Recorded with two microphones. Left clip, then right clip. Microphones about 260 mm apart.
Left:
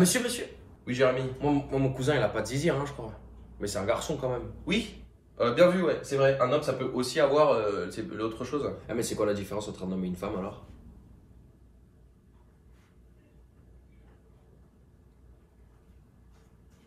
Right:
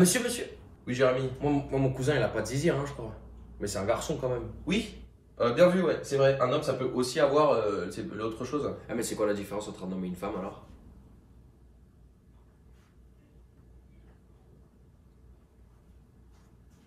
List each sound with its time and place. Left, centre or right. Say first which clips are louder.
0.0 s speech: even; centre
9.2 s speech: right 1 dB; right